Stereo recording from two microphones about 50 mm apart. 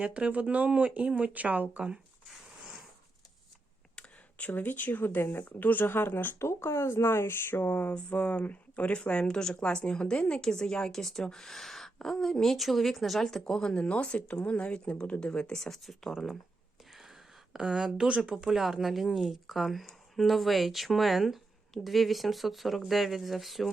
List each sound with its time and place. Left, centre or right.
0.0 s speech: right
3.9 s a sound: left
4.5 s speech: left
5.5 s speech: left
6.4 s speech: left
8.1 s speech: left
9.0 s speech: centre
16.9 s a sound: centre; by 18.4 s right
18.4 s a woman's voice: centre